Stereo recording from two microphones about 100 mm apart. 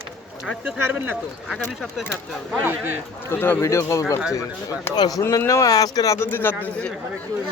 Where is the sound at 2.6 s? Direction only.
20° right (ahead or behind).